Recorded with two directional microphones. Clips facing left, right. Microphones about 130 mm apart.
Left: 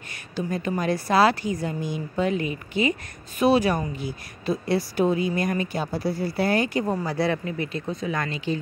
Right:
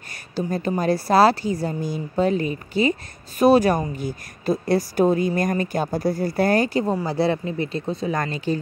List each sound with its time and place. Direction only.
0.5 s a woman's voice: 35° right (ahead or behind)